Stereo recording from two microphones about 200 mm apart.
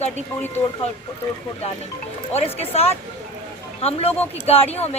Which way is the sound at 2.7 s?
30° left (ahead or behind).